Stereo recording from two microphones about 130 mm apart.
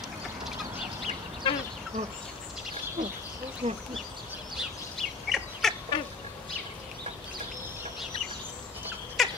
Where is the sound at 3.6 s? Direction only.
60° right (ahead or behind).